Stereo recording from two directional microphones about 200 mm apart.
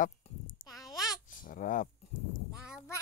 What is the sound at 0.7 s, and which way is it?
Babbling, centre (ahead or behind).